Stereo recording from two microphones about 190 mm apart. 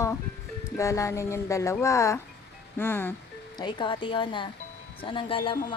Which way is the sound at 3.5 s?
25° left (ahead or behind).